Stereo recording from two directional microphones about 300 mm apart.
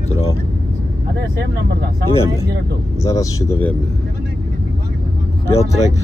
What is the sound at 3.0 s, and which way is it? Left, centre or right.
Speech, centre.